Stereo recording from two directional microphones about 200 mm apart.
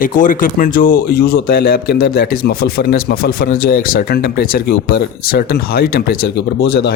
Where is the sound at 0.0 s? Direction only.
40° left (ahead or behind).